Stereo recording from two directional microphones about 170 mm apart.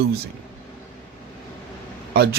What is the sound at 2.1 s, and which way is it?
Speech, 75° right (ahead or behind).